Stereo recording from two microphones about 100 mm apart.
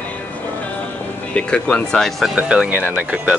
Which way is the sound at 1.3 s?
10° left (ahead or behind).